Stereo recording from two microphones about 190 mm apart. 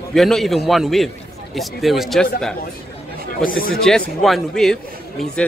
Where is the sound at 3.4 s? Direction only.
50° left (ahead or behind).